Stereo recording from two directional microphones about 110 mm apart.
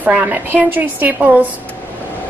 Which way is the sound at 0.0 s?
15° right (ahead or behind).